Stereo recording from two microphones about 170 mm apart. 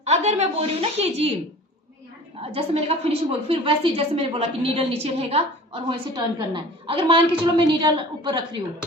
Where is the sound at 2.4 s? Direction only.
35° right (ahead or behind).